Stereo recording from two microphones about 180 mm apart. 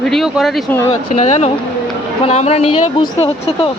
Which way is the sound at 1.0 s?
40° left (ahead or behind).